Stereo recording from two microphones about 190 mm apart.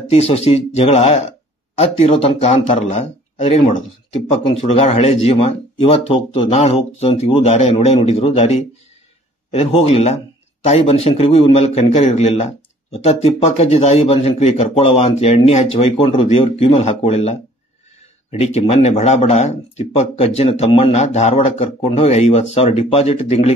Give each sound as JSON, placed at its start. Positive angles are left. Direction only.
{"t": 0.1, "sound": "a man's voice", "side_deg": 35}
{"t": 18.4, "sound": "a man's voice", "side_deg": 35}